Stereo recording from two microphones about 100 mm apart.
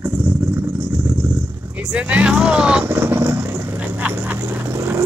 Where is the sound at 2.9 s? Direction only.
20° right (ahead or behind).